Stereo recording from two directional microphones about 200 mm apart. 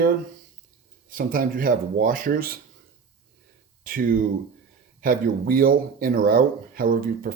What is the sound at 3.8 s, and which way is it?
Speech, 45° right (ahead or behind).